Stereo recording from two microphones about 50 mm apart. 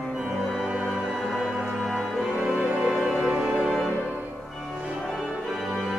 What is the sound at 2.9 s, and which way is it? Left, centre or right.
Music, centre.